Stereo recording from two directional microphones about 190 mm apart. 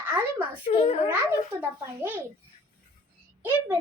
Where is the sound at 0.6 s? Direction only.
30° left (ahead or behind).